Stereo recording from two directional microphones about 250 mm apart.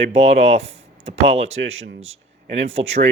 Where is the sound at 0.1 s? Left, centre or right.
Right.